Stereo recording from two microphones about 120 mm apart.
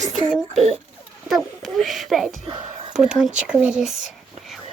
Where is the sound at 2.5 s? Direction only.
45° right (ahead or behind).